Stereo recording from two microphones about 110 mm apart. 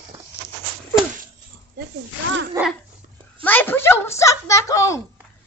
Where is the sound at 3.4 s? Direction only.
15° left (ahead or behind).